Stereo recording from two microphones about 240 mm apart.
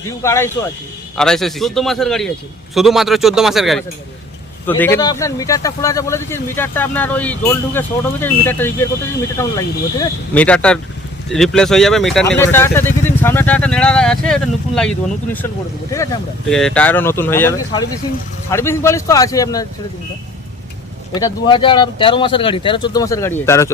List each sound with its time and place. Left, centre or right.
0.2 s speech: centre
4.8 s speech: centre
16.5 s speech: centre
21.1 s speech: centre